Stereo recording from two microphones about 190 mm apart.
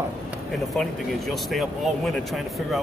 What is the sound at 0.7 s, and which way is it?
Speech, centre (ahead or behind).